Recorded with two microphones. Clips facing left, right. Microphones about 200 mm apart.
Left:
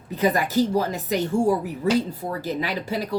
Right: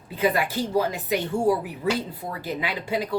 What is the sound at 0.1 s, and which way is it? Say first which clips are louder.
A woman's voice: left 2 dB; 40° left (ahead or behind).